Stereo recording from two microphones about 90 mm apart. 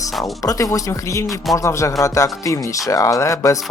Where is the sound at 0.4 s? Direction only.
40° left (ahead or behind).